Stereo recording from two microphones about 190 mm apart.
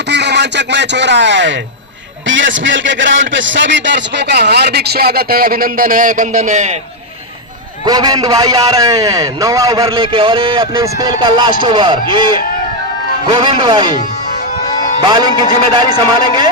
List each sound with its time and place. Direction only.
0.1 s speech: 65° right (ahead or behind)
2.2 s a man's voice: 80° right; by 6.7 s 40° right (ahead or behind)
7.9 s a man's voice: 20° right (ahead or behind)
14.8 s music: 40° left (ahead or behind)
15.0 s a man's voice: 20° right (ahead or behind)